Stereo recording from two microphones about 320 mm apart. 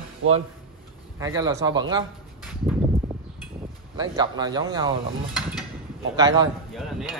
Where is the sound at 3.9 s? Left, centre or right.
Centre.